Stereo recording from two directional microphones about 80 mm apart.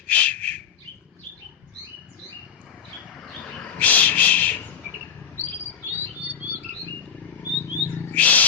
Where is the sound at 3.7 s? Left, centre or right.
Centre.